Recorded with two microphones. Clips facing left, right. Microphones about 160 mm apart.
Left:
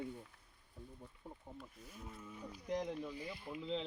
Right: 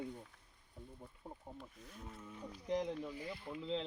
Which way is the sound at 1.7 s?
5° left (ahead or behind).